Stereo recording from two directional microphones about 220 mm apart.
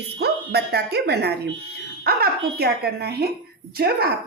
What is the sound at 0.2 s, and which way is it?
A woman's voice, 50° right (ahead or behind).